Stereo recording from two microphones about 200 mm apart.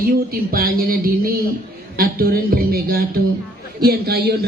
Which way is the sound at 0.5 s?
45° right (ahead or behind).